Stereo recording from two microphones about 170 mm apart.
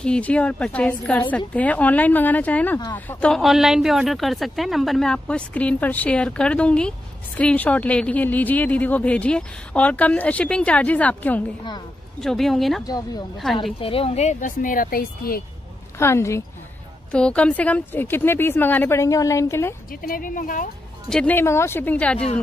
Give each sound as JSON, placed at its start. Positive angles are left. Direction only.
{"t": 0.0, "sound": "a woman's voice", "side_deg": 5}
{"t": 12.8, "sound": "speech", "side_deg": 20}
{"t": 13.7, "sound": "speech", "side_deg": 35}
{"t": 16.0, "sound": "speech", "side_deg": 15}
{"t": 17.1, "sound": "speech", "side_deg": 5}
{"t": 19.9, "sound": "a woman's voice", "side_deg": 55}
{"t": 21.1, "sound": "speech", "side_deg": 10}